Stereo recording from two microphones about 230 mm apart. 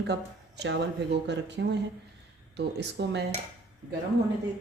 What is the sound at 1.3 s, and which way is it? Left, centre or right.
Speech, right.